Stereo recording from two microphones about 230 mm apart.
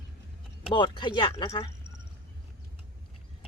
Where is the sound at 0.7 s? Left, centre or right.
Centre.